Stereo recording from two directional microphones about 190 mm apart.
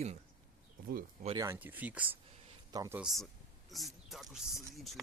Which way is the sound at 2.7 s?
20° right (ahead or behind).